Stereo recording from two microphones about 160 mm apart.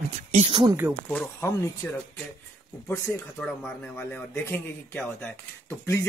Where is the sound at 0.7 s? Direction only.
15° right (ahead or behind).